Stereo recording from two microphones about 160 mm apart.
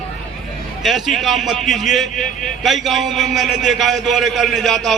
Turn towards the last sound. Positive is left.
turn(degrees=0)  # may be behind; listen again after turning